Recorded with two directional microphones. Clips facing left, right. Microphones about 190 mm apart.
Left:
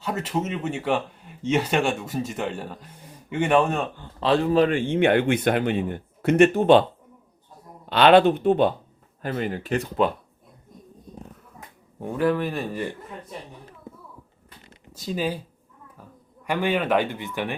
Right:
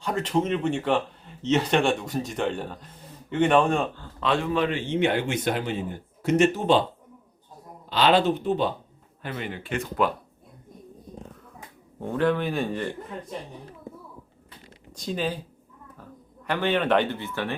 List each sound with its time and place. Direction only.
0.0 s speech: 5° left (ahead or behind)
4.2 s speech: 35° left (ahead or behind)
4.7 s speech: 50° left (ahead or behind)
7.9 s speech: 60° left (ahead or behind)
9.2 s speech: 40° left (ahead or behind)
11.9 s speech: 10° left (ahead or behind)
14.9 s speech: 5° left (ahead or behind)